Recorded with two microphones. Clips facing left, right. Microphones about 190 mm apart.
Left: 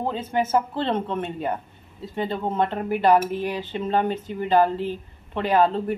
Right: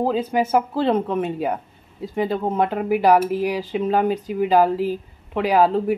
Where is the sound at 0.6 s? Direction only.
10° right (ahead or behind).